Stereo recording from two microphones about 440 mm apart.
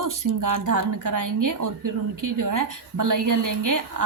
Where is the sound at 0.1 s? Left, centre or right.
Right.